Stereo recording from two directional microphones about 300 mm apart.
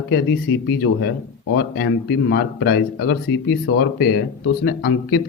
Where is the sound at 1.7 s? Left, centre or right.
Left.